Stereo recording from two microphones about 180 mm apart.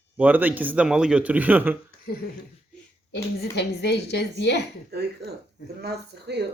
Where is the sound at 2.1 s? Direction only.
65° left (ahead or behind).